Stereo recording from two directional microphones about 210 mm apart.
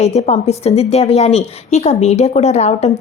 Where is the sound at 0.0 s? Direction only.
30° left (ahead or behind).